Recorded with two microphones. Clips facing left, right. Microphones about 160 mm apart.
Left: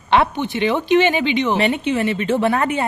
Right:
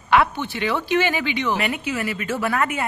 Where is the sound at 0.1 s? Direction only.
25° left (ahead or behind).